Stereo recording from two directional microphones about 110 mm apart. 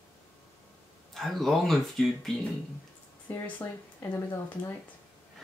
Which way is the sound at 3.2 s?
15° left (ahead or behind).